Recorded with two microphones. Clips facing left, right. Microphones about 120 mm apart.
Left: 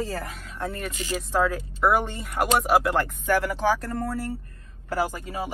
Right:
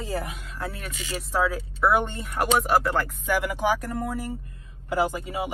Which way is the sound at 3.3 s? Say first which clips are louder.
Left 1 dB; 10° right (ahead or behind).